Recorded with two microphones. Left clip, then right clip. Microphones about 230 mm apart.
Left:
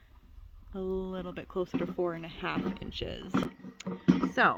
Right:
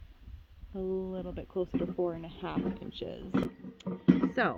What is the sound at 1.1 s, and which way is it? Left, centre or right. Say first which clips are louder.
Speech: even; left.